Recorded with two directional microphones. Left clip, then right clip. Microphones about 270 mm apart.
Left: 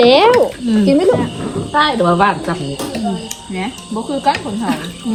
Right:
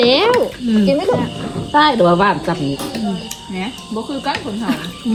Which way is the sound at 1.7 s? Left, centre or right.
Right.